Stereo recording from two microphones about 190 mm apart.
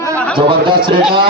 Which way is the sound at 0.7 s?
50° right (ahead or behind).